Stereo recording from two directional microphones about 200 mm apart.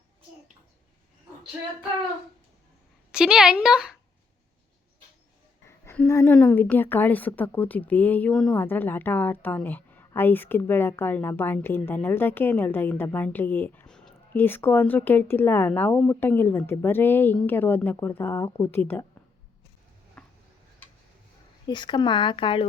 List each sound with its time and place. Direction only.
3.1 s speech: 5° right (ahead or behind)
5.6 s a woman's voice: 10° left (ahead or behind)
20.2 s a sound: 5° left (ahead or behind)
21.7 s speech: 20° left (ahead or behind)